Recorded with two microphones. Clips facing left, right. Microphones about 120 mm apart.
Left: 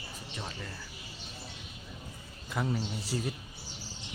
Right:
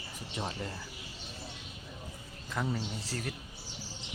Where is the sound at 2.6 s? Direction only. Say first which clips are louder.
Left 2 dB; 5° left (ahead or behind).